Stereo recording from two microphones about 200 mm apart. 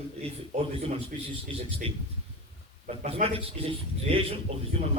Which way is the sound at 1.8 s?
30° right (ahead or behind).